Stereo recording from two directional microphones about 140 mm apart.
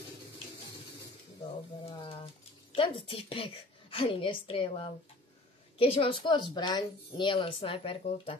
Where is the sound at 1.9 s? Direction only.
40° left (ahead or behind).